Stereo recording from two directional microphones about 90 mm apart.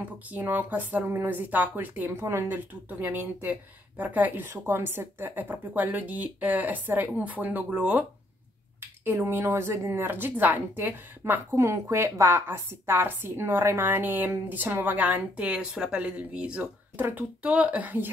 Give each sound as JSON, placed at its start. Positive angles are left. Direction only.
{"t": 0.3, "sound": "a woman's voice", "side_deg": -20}
{"t": 9.0, "sound": "a woman's voice", "side_deg": -25}
{"t": 11.5, "sound": "a woman's voice", "side_deg": -35}